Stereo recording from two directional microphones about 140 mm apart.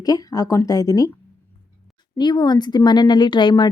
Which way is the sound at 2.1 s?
30° left (ahead or behind).